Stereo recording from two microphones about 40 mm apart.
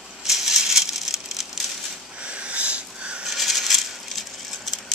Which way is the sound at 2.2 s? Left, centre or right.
Right.